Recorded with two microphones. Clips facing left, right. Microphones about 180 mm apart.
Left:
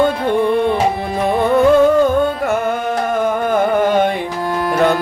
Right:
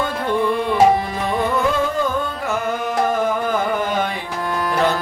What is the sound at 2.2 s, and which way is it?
Music, 60° left (ahead or behind).